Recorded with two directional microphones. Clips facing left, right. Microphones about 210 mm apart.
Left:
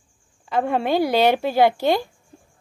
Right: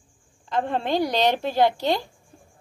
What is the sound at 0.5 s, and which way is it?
A woman's voice, 10° left (ahead or behind).